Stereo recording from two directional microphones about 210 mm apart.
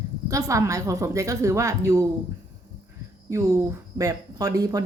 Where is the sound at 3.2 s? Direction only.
15° right (ahead or behind).